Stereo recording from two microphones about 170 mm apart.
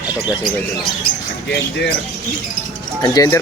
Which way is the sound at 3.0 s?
20° left (ahead or behind).